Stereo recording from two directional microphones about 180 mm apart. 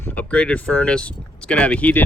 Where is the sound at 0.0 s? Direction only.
10° left (ahead or behind).